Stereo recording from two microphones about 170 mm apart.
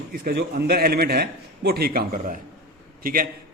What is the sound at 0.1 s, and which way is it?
A man's voice, 60° right (ahead or behind).